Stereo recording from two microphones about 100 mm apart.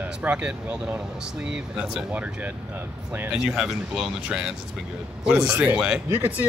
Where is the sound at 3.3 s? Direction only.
5° right (ahead or behind).